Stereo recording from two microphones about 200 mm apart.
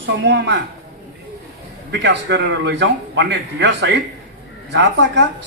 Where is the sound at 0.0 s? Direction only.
60° right (ahead or behind).